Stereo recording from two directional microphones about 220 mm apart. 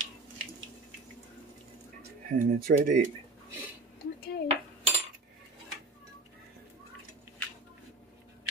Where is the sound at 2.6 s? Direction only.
40° right (ahead or behind).